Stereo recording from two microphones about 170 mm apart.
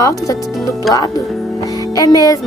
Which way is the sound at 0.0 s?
20° left (ahead or behind).